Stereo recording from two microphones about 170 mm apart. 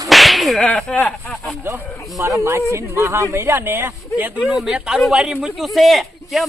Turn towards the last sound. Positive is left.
turn(degrees=0)  # may be behind; listen again after turning